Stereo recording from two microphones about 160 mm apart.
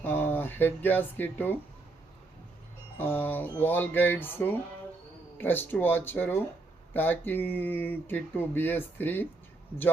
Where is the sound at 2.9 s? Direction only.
10° left (ahead or behind).